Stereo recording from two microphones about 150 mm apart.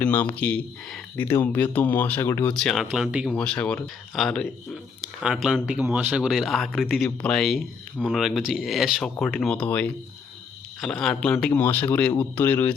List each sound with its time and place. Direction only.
0.0 s speech: 10° left (ahead or behind); by 3.2 s 5° right (ahead or behind)
3.2 s speech: 5° left (ahead or behind)